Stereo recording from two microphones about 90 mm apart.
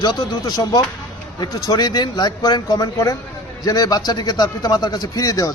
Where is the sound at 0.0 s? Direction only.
50° left (ahead or behind).